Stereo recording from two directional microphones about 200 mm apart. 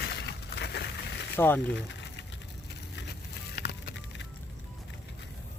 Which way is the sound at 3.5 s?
50° left (ahead or behind).